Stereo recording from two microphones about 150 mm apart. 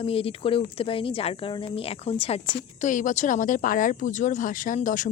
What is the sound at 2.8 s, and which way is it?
Speech, 60° left (ahead or behind).